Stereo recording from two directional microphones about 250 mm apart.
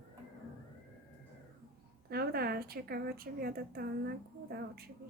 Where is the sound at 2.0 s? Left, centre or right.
Right.